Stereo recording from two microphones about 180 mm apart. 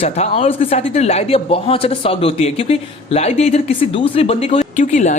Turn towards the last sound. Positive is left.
turn(degrees=45)  # may be behind; listen again after turning